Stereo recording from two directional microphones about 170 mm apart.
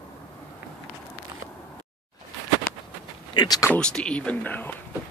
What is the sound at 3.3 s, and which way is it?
Speech, 25° left (ahead or behind).